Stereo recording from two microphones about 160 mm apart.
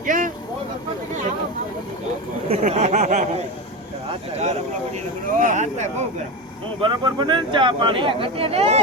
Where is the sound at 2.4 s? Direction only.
40° right (ahead or behind).